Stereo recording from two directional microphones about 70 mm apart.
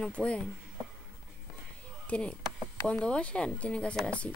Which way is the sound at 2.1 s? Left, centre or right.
Centre.